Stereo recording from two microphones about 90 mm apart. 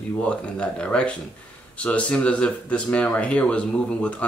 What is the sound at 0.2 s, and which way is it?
Speech, 10° left (ahead or behind).